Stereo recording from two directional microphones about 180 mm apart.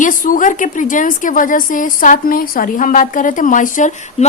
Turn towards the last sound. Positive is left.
turn(degrees=45)  # may be behind; listen again after turning